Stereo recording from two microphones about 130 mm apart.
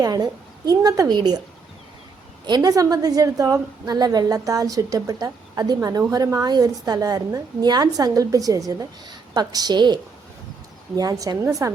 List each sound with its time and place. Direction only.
0.0 s a woman's voice: 30° right (ahead or behind)
2.5 s a woman's voice: 30° right (ahead or behind)